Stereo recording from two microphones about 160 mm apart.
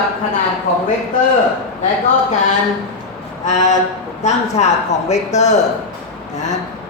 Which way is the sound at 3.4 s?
50° left (ahead or behind).